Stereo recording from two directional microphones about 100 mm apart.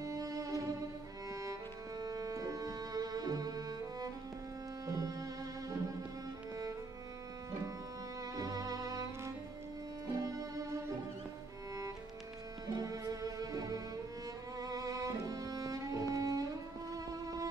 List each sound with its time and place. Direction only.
0.0 s music: 35° right (ahead or behind)
8.4 s music: 40° right (ahead or behind)
12.6 s music: 35° right (ahead or behind)